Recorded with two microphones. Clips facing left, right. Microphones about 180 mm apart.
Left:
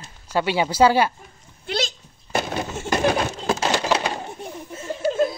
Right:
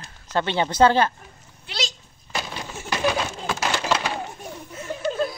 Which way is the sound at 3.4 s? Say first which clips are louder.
Left 4 dB; 35° left (ahead or behind).